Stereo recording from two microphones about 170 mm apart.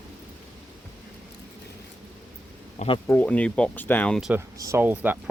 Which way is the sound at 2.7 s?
35° left (ahead or behind).